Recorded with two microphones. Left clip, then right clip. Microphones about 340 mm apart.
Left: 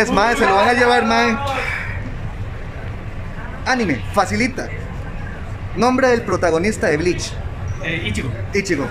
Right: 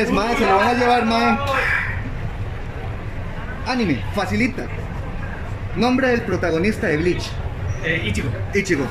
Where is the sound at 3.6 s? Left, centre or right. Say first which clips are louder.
Left 4 dB; centre.